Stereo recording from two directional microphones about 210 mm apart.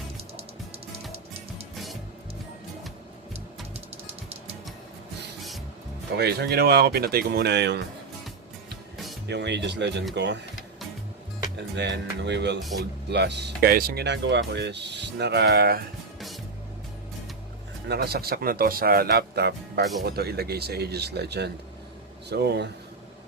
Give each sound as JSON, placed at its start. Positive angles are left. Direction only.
{"t": 1.7, "sound": "music", "side_deg": 0}
{"t": 6.1, "sound": "speech", "side_deg": -50}
{"t": 9.2, "sound": "speech", "side_deg": -55}
{"t": 11.7, "sound": "speech", "side_deg": -55}
{"t": 17.8, "sound": "speech", "side_deg": -50}